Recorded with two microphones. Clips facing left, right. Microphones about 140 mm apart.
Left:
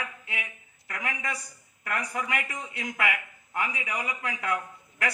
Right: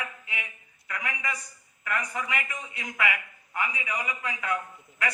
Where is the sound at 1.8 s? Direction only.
70° left (ahead or behind).